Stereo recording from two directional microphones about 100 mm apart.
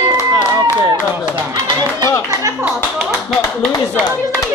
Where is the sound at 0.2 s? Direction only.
30° left (ahead or behind).